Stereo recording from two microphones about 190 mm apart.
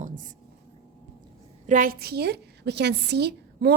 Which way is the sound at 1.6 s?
45° right (ahead or behind).